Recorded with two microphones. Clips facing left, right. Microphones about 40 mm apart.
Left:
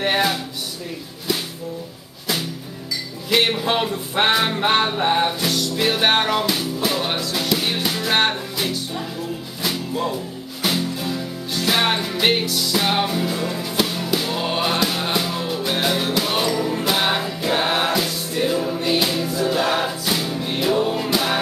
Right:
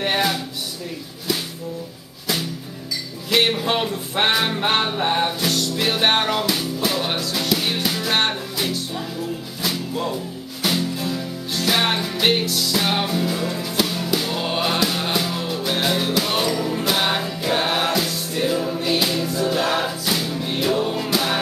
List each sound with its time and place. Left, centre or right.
0.0 s speech: centre
3.3 s music: centre